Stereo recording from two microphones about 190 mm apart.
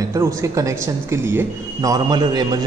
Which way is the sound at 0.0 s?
15° right (ahead or behind).